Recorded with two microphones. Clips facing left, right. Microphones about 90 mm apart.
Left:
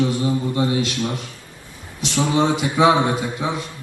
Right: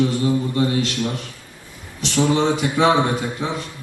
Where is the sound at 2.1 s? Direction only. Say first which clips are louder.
Right 1 dB; 20° left (ahead or behind).